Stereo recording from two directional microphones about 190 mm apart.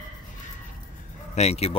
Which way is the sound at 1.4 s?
35° left (ahead or behind).